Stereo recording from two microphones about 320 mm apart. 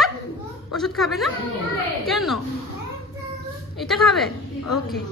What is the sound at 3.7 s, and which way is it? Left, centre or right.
Speech, centre.